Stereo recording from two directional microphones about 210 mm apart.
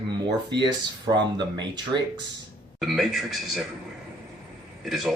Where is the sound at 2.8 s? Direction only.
Centre (ahead or behind).